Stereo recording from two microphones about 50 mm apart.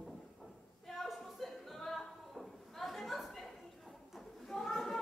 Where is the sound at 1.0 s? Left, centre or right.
Centre.